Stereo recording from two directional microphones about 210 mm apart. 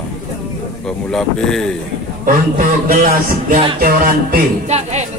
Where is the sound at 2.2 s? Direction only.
40° right (ahead or behind).